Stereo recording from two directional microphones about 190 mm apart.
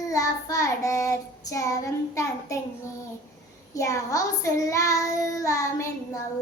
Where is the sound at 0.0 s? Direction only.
15° left (ahead or behind).